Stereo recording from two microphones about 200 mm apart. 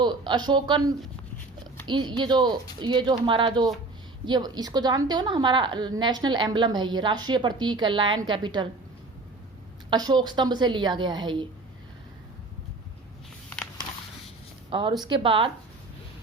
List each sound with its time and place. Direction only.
0.0 s a woman's voice: 20° right (ahead or behind)
9.9 s a woman's voice: 20° right (ahead or behind)
14.7 s a woman's voice: 25° right (ahead or behind)